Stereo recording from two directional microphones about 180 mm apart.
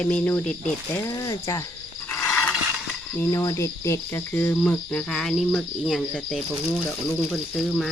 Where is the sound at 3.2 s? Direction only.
15° left (ahead or behind).